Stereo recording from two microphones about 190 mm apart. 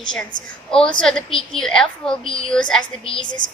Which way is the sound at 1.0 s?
5° left (ahead or behind).